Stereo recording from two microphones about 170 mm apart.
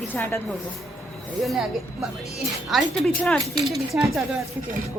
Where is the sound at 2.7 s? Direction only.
Centre (ahead or behind).